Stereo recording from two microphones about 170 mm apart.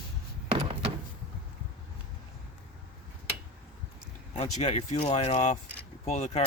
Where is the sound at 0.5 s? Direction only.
30° right (ahead or behind).